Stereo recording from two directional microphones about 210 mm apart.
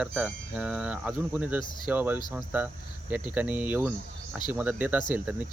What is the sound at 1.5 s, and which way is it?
Speech, 20° left (ahead or behind).